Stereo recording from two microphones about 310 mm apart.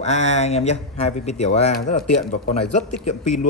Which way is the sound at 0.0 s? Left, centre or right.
Left.